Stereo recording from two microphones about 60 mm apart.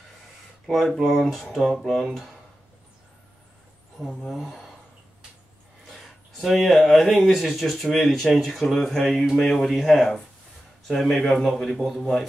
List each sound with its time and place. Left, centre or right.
0.7 s speech: centre
4.2 s speech: centre
6.4 s speech: centre